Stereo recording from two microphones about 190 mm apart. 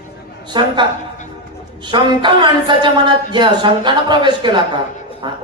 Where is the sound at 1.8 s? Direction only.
25° right (ahead or behind).